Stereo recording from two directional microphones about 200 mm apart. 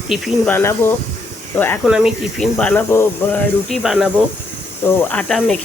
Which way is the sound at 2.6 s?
10° left (ahead or behind).